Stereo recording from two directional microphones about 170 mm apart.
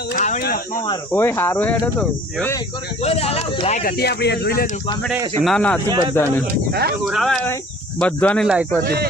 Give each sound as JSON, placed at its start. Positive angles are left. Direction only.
{"t": 0.2, "sound": "a sound", "side_deg": 45}
{"t": 0.4, "sound": "speech", "side_deg": 60}
{"t": 1.1, "sound": "speech", "side_deg": 15}
{"t": 3.0, "sound": "speech", "side_deg": 35}
{"t": 3.8, "sound": "speech", "side_deg": 65}
{"t": 5.4, "sound": "speech", "side_deg": 0}
{"t": 5.9, "sound": "speech", "side_deg": -25}
{"t": 6.7, "sound": "speech", "side_deg": -70}
{"t": 7.0, "sound": "speech", "side_deg": 0}
{"t": 8.4, "sound": "speech", "side_deg": -5}
{"t": 8.8, "sound": "speech", "side_deg": -65}